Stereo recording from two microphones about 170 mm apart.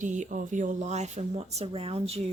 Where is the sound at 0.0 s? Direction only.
45° right (ahead or behind).